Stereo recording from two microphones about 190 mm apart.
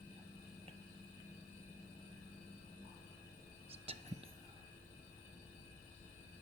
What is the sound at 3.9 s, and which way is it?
Music, 30° right (ahead or behind).